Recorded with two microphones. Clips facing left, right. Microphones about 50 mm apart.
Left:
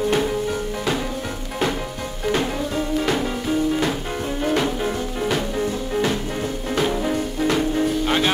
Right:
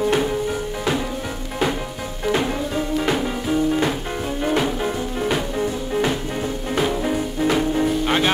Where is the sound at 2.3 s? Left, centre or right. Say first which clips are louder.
Right 1 dB; centre.